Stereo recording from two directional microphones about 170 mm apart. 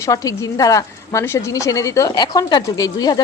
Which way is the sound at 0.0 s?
20° left (ahead or behind).